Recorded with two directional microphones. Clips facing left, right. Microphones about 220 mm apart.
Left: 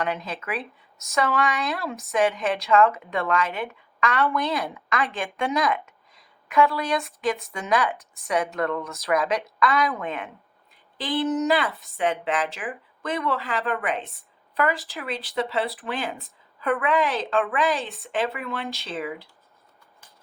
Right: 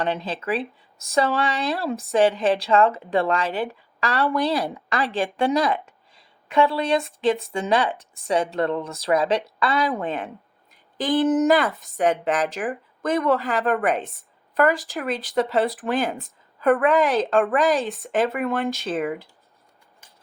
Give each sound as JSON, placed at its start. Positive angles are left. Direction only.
{"t": 0.0, "sound": "speech", "side_deg": -30}
{"t": 10.9, "sound": "speech", "side_deg": -45}
{"t": 17.8, "sound": "speech", "side_deg": 0}
{"t": 18.1, "sound": "speech", "side_deg": -45}